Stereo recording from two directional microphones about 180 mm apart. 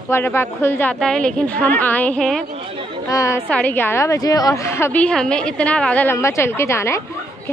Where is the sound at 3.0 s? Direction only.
20° left (ahead or behind).